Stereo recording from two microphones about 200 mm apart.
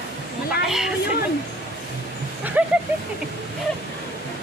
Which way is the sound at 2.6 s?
10° right (ahead or behind).